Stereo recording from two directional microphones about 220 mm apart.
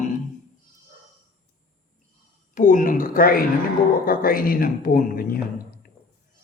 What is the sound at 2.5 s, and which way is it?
A woman's voice, 35° left (ahead or behind).